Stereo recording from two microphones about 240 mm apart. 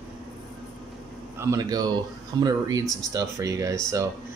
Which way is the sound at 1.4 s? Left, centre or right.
Centre.